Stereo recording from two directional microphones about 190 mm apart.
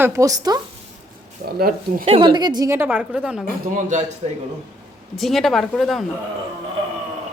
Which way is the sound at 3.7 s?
40° right (ahead or behind).